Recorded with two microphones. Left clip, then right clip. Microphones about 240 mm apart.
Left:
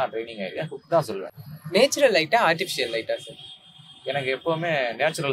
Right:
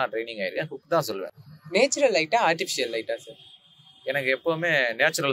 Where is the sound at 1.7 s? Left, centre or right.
Right.